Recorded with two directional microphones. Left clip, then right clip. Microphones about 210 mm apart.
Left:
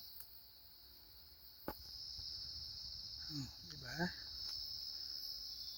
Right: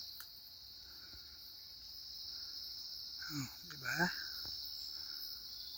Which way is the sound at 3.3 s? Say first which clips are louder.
Right 3 dB; 5° right (ahead or behind).